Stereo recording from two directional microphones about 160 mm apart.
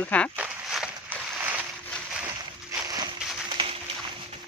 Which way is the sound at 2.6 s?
25° right (ahead or behind).